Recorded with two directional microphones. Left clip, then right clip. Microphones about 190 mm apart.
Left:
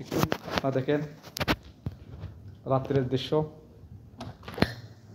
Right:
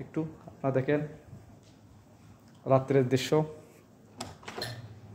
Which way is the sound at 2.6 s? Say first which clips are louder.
Right 2 dB; 40° right (ahead or behind).